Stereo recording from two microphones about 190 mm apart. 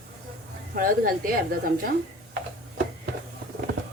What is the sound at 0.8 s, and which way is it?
A woman's voice, 50° right (ahead or behind).